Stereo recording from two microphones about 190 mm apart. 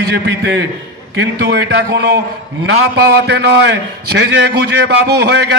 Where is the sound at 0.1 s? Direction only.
65° right (ahead or behind).